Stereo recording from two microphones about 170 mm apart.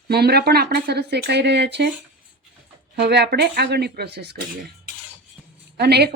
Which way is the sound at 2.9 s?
75° right (ahead or behind).